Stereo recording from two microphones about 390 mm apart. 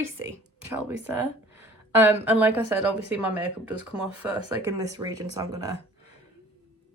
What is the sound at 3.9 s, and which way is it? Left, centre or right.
Speech, centre.